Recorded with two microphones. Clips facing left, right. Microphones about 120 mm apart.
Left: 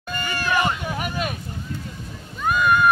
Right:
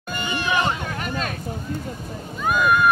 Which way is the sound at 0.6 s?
10° left (ahead or behind).